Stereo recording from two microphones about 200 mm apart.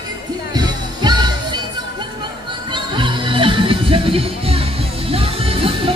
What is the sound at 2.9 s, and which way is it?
Music, 25° right (ahead or behind).